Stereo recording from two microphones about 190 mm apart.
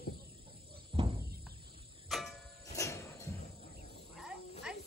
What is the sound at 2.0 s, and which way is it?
Cricket, centre (ahead or behind).